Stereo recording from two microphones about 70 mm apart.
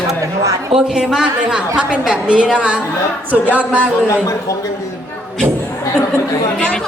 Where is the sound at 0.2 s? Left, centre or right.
Right.